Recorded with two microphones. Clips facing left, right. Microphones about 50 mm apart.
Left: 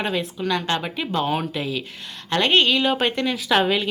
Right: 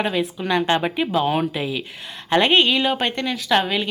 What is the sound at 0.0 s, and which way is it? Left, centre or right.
Speech, centre.